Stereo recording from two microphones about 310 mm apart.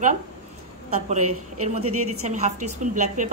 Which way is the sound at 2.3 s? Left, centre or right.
Right.